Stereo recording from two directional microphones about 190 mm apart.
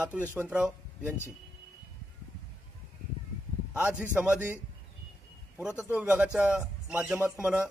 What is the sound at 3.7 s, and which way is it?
Speech, 5° right (ahead or behind).